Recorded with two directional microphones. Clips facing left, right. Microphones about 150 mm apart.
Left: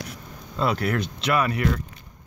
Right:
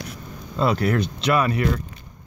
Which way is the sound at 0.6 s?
30° right (ahead or behind).